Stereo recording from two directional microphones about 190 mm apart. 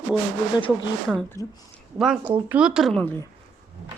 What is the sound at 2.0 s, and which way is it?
A woman's voice, 5° right (ahead or behind).